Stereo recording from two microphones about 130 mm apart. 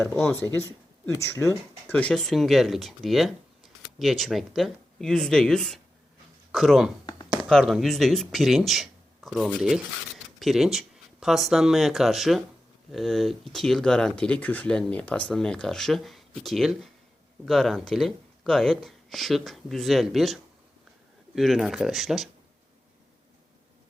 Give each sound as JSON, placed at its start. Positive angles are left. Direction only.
{"t": 1.1, "sound": "speech", "side_deg": 20}
{"t": 7.0, "sound": "a sound", "side_deg": 30}
{"t": 7.4, "sound": "speech", "side_deg": 0}